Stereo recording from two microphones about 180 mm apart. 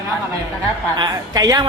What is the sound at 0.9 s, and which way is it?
Speech, 20° right (ahead or behind).